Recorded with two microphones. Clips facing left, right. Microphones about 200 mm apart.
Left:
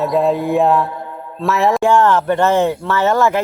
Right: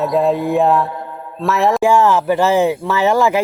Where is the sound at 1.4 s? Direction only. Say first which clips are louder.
Even; centre (ahead or behind).